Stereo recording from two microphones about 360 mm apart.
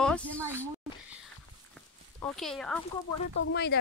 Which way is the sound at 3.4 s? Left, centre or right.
Left.